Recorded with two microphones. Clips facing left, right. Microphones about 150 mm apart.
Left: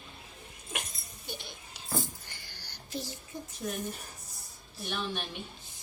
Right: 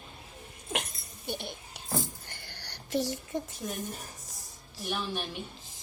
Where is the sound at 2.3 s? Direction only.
60° right (ahead or behind); by 3.4 s 80° right.